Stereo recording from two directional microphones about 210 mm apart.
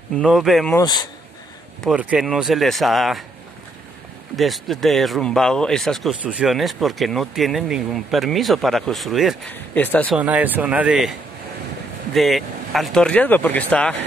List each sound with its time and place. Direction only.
0.1 s speech: centre (ahead or behind)
0.7 s speech: 20° left (ahead or behind)
1.8 s speech: 5° right (ahead or behind)
4.4 s speech: centre (ahead or behind)
10.1 s speech: 5° right (ahead or behind)